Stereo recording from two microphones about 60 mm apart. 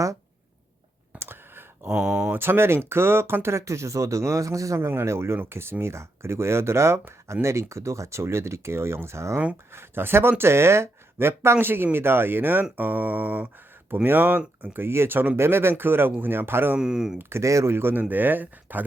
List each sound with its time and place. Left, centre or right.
1.2 s clicking: right
1.9 s speech: centre
2.3 s speech: right
3.6 s speech: right
4.8 s speech: right
12.7 s a sound: right
13.9 s speech: right
16.7 s speech: centre
17.2 s speech: right
17.4 s speech: right